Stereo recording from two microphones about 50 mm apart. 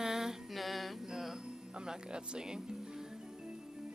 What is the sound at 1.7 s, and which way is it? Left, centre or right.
Mantra, centre.